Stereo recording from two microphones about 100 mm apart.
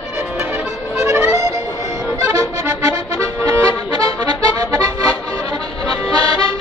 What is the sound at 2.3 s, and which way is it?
Music, 30° right (ahead or behind).